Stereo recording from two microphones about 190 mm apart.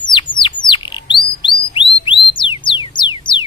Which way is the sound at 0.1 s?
25° left (ahead or behind).